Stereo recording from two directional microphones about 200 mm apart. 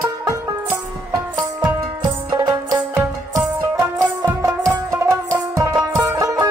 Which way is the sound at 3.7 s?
15° right (ahead or behind).